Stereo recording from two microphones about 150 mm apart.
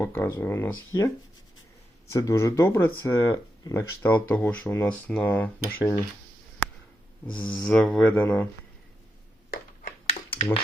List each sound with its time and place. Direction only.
0.0 s speech: 15° left (ahead or behind)
2.1 s speech: 20° left (ahead or behind)
7.3 s speech: 10° left (ahead or behind)
10.1 s a sound: 35° left (ahead or behind)